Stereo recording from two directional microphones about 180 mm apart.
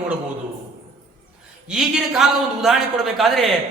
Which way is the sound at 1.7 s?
5° right (ahead or behind).